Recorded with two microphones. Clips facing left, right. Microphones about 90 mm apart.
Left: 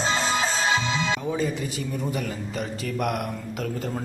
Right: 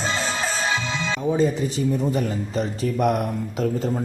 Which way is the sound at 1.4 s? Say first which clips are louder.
Right 6 dB; 30° right (ahead or behind).